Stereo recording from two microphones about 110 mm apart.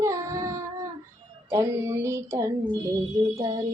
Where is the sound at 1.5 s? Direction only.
25° right (ahead or behind).